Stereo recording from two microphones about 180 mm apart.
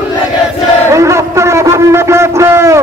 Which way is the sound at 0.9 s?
15° right (ahead or behind).